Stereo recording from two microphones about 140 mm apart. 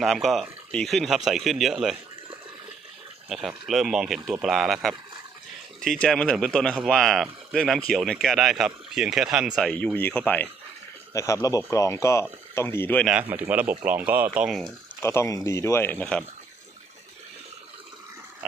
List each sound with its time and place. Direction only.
0.0 s speech: centre (ahead or behind)
3.2 s speech: centre (ahead or behind)
11.1 s speech: 20° left (ahead or behind)
13.1 s speech: 10° right (ahead or behind)
15.0 s speech: 20° left (ahead or behind)